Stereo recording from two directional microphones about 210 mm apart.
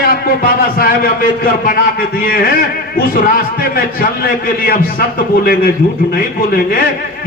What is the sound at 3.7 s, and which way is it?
A man's voice, 45° left (ahead or behind).